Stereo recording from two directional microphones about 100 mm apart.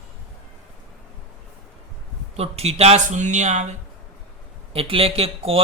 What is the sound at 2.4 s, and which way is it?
Speech, 90° right.